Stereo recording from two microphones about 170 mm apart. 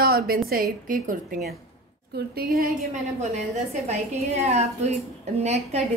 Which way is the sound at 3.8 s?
40° right (ahead or behind).